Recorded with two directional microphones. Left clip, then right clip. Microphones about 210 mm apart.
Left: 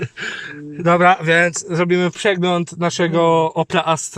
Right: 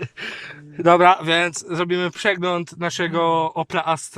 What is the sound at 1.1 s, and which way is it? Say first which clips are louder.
Speech: left 5 dB; 25° right (ahead or behind).